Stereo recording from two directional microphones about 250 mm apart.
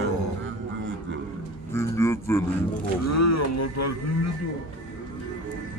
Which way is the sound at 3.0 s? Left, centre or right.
Left.